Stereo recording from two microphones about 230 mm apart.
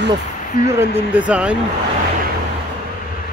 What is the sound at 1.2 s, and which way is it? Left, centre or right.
Speech, centre.